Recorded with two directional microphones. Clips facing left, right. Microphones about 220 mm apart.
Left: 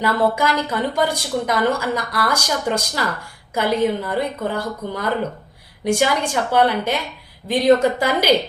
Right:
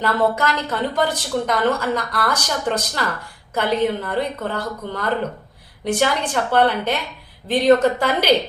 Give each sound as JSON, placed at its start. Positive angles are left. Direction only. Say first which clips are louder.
{"t": 0.0, "sound": "speech", "louder": "left 1 dB", "side_deg": 10}